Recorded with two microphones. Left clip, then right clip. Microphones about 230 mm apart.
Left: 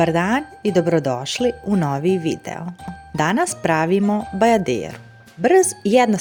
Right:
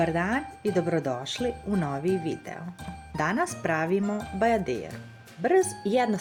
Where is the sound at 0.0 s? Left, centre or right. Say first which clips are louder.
Left 8 dB; left.